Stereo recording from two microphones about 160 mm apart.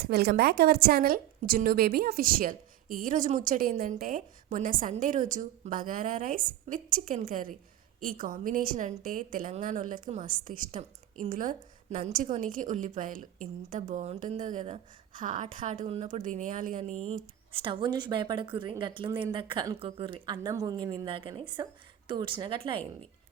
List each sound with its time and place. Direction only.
0.0 s a woman's voice: 75° right (ahead or behind); by 22.9 s 35° right (ahead or behind)